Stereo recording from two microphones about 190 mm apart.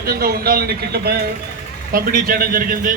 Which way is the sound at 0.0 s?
50° right (ahead or behind).